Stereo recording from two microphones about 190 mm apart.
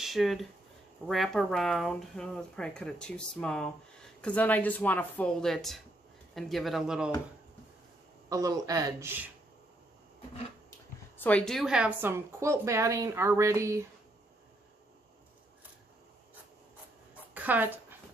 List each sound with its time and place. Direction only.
0.0 s speech: centre (ahead or behind)
8.3 s speech: 20° right (ahead or behind)
11.1 s speech: 5° left (ahead or behind); by 13.8 s 15° right (ahead or behind)
17.3 s a sound: 10° right (ahead or behind)